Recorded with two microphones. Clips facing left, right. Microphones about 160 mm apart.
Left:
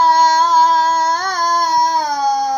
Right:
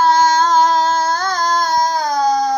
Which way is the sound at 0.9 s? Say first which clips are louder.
Even; 15° left (ahead or behind).